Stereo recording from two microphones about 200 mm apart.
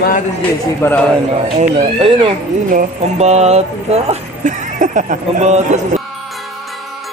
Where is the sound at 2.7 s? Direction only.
40° right (ahead or behind).